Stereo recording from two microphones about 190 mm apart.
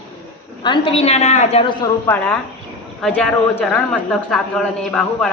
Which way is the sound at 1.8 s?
10° left (ahead or behind).